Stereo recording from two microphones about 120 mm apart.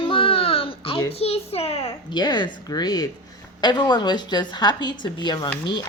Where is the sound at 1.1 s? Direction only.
55° left (ahead or behind).